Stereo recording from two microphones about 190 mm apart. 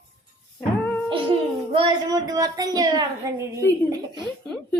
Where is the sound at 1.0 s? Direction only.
25° right (ahead or behind).